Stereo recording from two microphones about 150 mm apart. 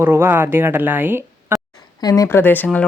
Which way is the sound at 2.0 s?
20° left (ahead or behind).